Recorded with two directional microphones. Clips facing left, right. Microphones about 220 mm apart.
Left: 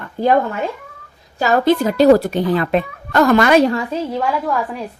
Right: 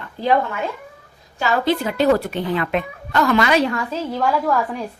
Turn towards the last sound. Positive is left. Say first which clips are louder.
# right 1 dB
turn(degrees=0)  # may be behind; listen again after turning